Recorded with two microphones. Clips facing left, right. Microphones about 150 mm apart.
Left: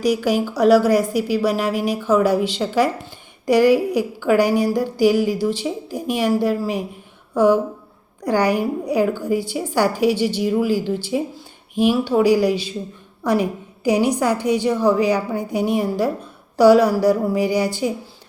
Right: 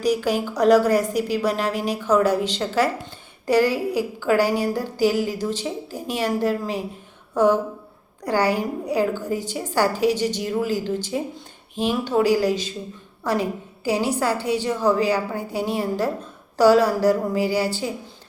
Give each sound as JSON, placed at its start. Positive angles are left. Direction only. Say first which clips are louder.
{"t": 0.0, "sound": "a woman's voice", "louder": "left 3 dB", "side_deg": 10}